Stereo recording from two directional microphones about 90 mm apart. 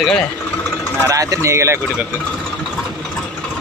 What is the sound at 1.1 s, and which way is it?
Speech, 40° right (ahead or behind).